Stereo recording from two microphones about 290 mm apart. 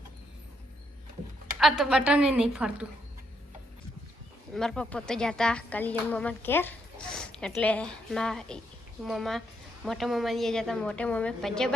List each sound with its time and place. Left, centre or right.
1.5 s speech: centre
4.5 s speech: centre